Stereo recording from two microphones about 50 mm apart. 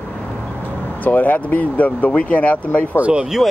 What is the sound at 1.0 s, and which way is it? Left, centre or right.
Speech, left.